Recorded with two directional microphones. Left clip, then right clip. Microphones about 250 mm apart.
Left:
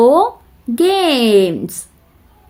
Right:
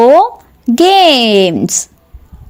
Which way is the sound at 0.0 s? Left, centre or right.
Right.